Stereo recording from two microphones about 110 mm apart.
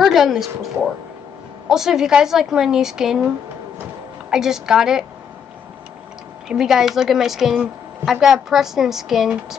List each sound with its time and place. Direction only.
0.0 s a sound: centre (ahead or behind)
1.7 s a woman's voice: 5° right (ahead or behind)
4.3 s a woman's voice: 5° right (ahead or behind)
6.5 s a woman's voice: 5° right (ahead or behind)